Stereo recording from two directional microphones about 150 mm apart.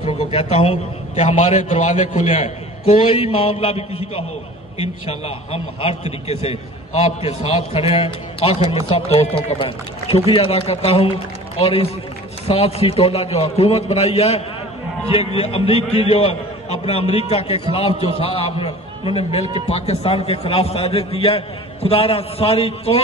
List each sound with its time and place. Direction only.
0.0 s a sound: 35° left (ahead or behind)
1.5 s a man's voice: 50° left (ahead or behind)
3.1 s a man's voice: 35° left (ahead or behind)